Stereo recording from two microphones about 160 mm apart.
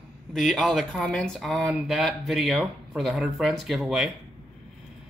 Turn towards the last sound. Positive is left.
turn(degrees=0)  # may be behind; listen again after turning